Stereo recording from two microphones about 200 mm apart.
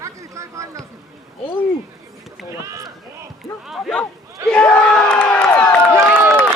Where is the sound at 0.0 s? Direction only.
15° right (ahead or behind).